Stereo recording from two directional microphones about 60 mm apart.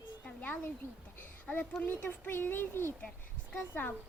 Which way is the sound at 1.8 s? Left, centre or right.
Left.